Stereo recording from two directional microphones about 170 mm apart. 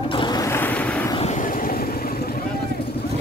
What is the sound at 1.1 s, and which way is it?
Vehicle, 45° left (ahead or behind).